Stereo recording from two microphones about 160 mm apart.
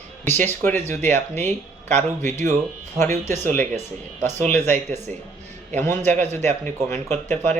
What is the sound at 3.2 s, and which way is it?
Speech, 15° left (ahead or behind).